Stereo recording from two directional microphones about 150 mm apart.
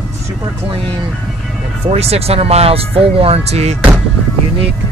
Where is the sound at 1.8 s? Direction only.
45° right (ahead or behind).